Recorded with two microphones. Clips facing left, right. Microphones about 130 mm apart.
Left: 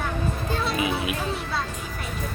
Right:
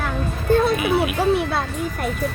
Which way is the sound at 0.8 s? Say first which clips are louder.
Right 6 dB; 25° left (ahead or behind).